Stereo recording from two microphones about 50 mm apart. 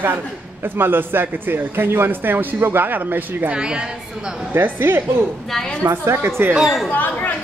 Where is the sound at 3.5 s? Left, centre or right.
Centre.